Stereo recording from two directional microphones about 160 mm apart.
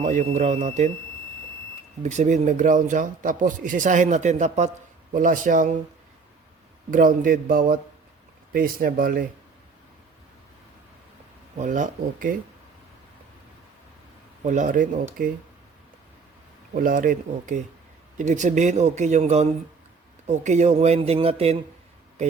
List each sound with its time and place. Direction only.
0.0 s speech: 50° right (ahead or behind)
2.0 s speech: 50° right (ahead or behind)
6.9 s speech: 55° right (ahead or behind)
11.5 s speech: 50° right (ahead or behind)
14.4 s speech: 50° right (ahead or behind)
16.7 s speech: 60° right (ahead or behind); by 21.6 s 40° right (ahead or behind)